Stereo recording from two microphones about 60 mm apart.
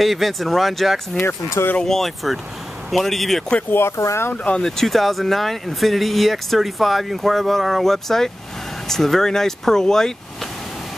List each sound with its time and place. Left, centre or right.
0.0 s speech: centre
1.2 s speech: left
1.8 s speech: centre
3.9 s speech: left
4.6 s speech: centre